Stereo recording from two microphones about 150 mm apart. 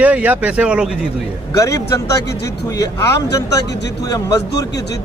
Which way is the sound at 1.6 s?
20° left (ahead or behind).